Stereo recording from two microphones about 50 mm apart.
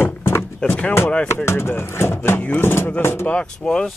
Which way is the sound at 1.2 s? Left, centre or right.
Left.